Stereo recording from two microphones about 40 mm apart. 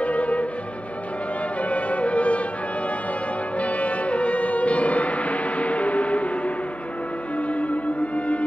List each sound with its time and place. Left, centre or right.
0.0 s music: left
1.6 s music: left
3.5 s music: left